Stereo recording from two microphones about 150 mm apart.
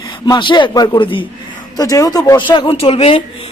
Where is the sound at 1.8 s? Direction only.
25° left (ahead or behind); by 3.2 s 40° left (ahead or behind).